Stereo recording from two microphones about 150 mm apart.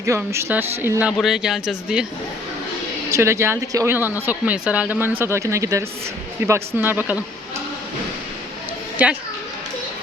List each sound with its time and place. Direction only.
0.0 s speech: 20° right (ahead or behind)
3.1 s speech: 20° right (ahead or behind)
9.0 s speech: 10° right (ahead or behind)